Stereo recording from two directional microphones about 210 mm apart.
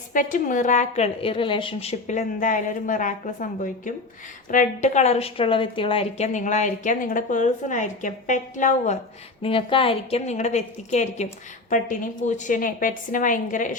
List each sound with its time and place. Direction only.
0.1 s a woman's voice: 40° left (ahead or behind)
9.4 s a woman's voice: 25° left (ahead or behind)